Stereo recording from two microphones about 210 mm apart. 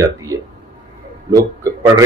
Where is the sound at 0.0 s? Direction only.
15° right (ahead or behind).